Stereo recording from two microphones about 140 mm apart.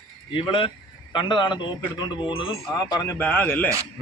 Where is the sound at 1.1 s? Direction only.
35° left (ahead or behind).